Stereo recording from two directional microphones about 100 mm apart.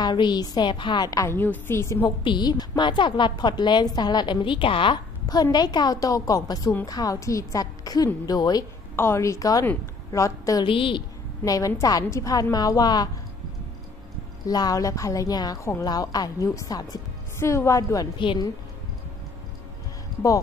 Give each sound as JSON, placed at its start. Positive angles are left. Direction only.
{"t": 0.0, "sound": "a woman's voice", "side_deg": 50}
{"t": 2.0, "sound": "a woman's voice", "side_deg": 45}
{"t": 5.3, "sound": "a woman's voice", "side_deg": 40}
{"t": 8.9, "sound": "a woman's voice", "side_deg": 25}
{"t": 10.6, "sound": "a woman's voice", "side_deg": 60}
{"t": 11.4, "sound": "a woman's voice", "side_deg": 35}
{"t": 14.4, "sound": "a woman's voice", "side_deg": 40}
{"t": 17.4, "sound": "a woman's voice", "side_deg": 30}
{"t": 18.1, "sound": "a woman's voice", "side_deg": 55}